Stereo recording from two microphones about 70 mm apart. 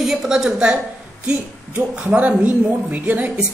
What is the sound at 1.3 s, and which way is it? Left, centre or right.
A woman's voice, right.